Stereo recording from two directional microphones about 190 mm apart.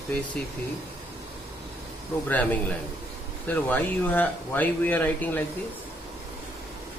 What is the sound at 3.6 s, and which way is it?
Speech, 10° left (ahead or behind).